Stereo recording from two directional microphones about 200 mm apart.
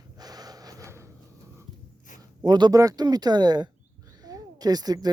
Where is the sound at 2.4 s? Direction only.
20° right (ahead or behind).